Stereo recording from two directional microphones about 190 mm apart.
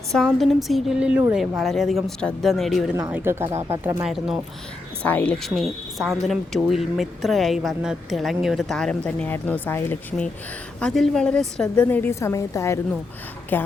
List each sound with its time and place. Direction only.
0.3 s speech: centre (ahead or behind)
5.0 s a woman's voice: 5° left (ahead or behind)